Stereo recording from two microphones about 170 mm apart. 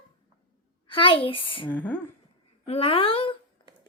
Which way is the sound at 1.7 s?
10° left (ahead or behind).